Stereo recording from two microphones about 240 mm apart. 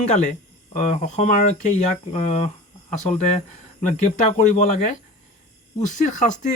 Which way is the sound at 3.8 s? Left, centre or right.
Left.